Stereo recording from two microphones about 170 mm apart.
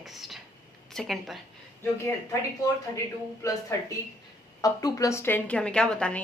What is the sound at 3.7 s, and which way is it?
A woman's voice, 15° left (ahead or behind).